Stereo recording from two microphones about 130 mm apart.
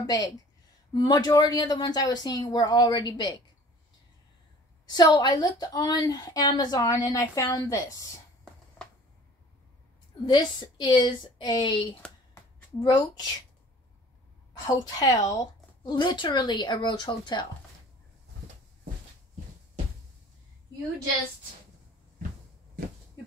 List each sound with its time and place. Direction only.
0.0 s a woman's voice: 25° left (ahead or behind)
4.8 s a woman's voice: 35° left (ahead or behind)
10.2 s a woman's voice: 35° left (ahead or behind)
14.5 s a woman's voice: 30° left (ahead or behind)